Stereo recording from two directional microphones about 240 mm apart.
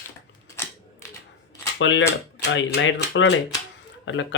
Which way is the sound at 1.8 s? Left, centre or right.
Left.